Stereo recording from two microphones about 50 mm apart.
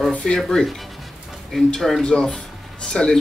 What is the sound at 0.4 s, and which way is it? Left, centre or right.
A man's voice, centre.